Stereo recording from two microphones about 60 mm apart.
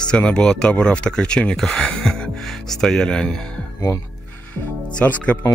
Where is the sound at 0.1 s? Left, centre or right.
Centre.